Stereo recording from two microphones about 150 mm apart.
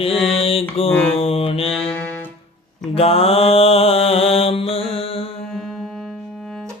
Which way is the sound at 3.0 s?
40° left (ahead or behind).